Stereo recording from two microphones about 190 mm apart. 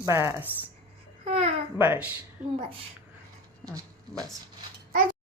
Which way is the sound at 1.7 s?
10° right (ahead or behind).